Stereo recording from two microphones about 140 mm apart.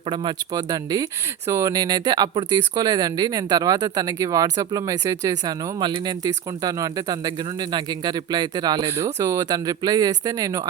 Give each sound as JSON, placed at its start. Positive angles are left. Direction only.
{"t": 0.1, "sound": "speech", "side_deg": -35}